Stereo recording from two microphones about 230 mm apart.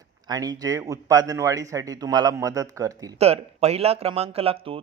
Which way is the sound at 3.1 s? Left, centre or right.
Right.